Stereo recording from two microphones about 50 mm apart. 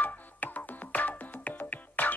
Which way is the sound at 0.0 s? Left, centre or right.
Left.